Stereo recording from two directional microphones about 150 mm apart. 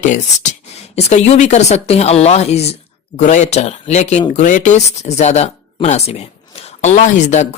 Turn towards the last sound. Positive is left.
turn(degrees=55)  # may be behind; listen again after turning